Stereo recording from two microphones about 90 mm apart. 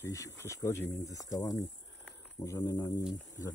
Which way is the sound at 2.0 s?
30° left (ahead or behind).